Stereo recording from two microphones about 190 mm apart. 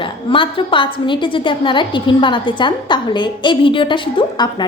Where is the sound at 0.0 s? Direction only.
25° left (ahead or behind).